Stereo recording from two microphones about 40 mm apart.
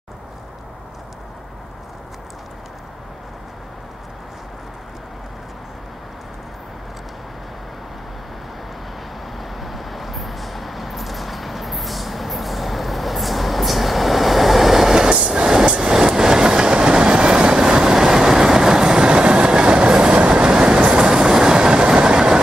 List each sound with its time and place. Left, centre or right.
9.4 s vehicle: centre
15.2 s train: centre